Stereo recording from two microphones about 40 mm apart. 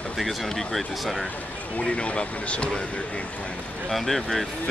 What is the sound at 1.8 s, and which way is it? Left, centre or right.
Speech, left.